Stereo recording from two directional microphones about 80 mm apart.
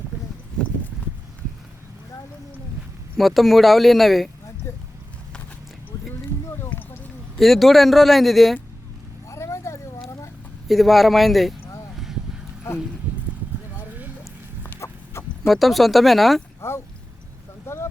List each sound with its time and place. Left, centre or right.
3.2 s speech: centre
4.7 s vehicle: left
6.6 s a sound: left
7.3 s speech: centre
9.3 s vehicle: left
10.7 s speech: centre
14.8 s chicken: left
15.4 s speech: centre
16.6 s speech: left
17.7 s a sound: left